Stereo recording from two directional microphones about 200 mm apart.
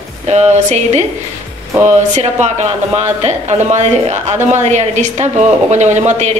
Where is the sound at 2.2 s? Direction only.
35° right (ahead or behind).